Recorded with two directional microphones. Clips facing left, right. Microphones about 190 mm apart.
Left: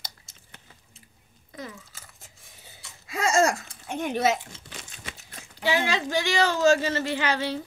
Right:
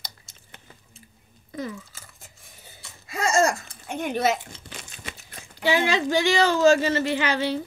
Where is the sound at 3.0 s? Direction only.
45° right (ahead or behind).